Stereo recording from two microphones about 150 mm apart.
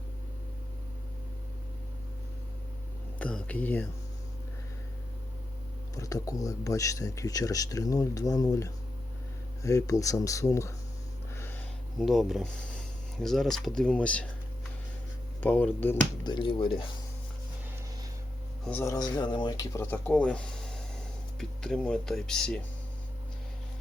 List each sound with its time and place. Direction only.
3.2 s speech: 10° left (ahead or behind)
6.0 s speech: 20° left (ahead or behind)
11.3 s a sound: 15° left (ahead or behind)
11.9 s speech: centre (ahead or behind)
15.4 s speech: 10° left (ahead or behind)
16.2 s speech: 30° left (ahead or behind)
18.6 s speech: 10° left (ahead or behind)
18.9 s speech: 25° left (ahead or behind); by 22.6 s 5° left (ahead or behind)